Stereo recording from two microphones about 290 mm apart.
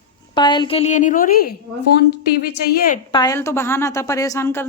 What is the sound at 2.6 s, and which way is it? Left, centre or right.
Speech, left.